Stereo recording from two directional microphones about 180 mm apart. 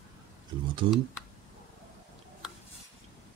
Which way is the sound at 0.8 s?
30° right (ahead or behind).